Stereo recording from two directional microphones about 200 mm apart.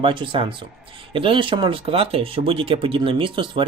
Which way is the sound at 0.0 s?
25° right (ahead or behind).